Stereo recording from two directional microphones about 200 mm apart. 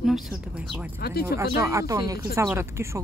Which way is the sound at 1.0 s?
50° left (ahead or behind).